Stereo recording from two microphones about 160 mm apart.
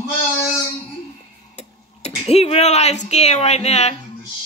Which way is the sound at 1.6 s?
40° left (ahead or behind).